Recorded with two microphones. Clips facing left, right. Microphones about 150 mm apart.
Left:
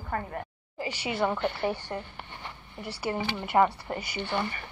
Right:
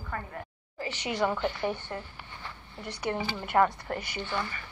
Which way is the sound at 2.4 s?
10° left (ahead or behind).